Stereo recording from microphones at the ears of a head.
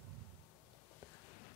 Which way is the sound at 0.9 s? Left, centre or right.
Left.